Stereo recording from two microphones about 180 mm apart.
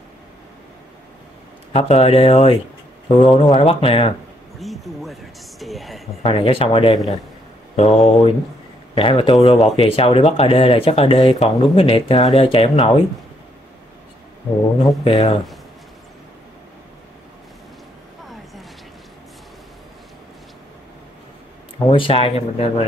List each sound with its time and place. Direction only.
1.7 s speech: 35° left (ahead or behind)
3.2 s speech: 25° left (ahead or behind)
4.6 s speech: centre (ahead or behind)
6.2 s speech: 30° left (ahead or behind)
14.8 s speech: 30° left (ahead or behind)
21.8 s speech: 30° left (ahead or behind)